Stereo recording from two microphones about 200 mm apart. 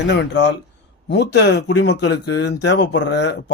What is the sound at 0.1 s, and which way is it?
Speech, 60° left (ahead or behind).